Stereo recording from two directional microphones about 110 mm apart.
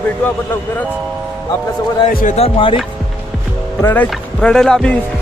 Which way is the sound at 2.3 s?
60° left (ahead or behind).